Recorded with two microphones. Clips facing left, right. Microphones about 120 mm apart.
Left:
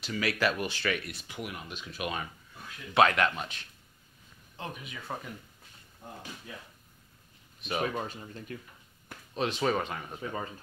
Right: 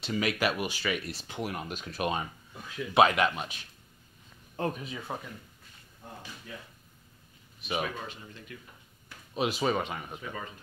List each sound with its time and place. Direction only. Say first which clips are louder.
0.0 s speech: right 1 dB; 25° right (ahead or behind)
1.0 s speech: right 4 dB; 30° right (ahead or behind)
2.9 s speech: right 1 dB; 15° right (ahead or behind)
4.6 s speech: right 8 dB; 45° right (ahead or behind)
5.1 s speech: even; 10° right (ahead or behind)
7.8 s speech: left 4 dB; 35° left (ahead or behind)
9.3 s speech: right 1 dB; 10° right (ahead or behind)
10.2 s speech: left 3 dB; 30° left (ahead or behind)